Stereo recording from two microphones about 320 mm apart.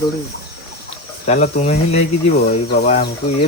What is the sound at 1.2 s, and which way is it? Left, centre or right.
Speech, left.